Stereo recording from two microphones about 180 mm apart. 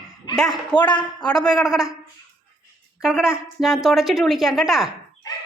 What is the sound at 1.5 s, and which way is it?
Speech, centre (ahead or behind).